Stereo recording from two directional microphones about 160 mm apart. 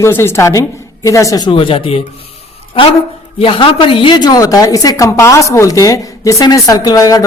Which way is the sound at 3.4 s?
35° left (ahead or behind).